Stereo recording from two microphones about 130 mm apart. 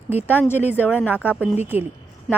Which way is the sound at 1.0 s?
15° left (ahead or behind).